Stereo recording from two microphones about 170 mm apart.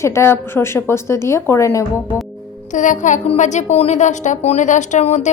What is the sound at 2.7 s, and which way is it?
A woman's voice, 45° left (ahead or behind).